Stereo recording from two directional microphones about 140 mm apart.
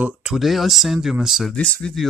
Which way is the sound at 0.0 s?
5° right (ahead or behind).